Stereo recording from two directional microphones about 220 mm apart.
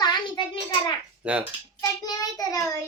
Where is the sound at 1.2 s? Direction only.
5° right (ahead or behind).